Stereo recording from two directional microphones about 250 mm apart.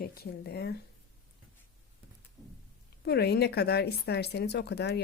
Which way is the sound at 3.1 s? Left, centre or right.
Left.